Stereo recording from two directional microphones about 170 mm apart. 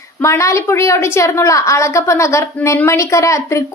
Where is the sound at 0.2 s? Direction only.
15° left (ahead or behind).